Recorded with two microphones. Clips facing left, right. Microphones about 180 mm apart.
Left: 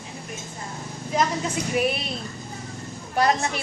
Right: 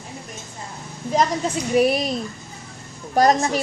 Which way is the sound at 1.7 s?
40° right (ahead or behind).